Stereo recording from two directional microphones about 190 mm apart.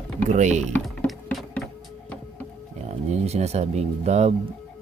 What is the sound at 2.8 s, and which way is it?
Speech, 35° right (ahead or behind).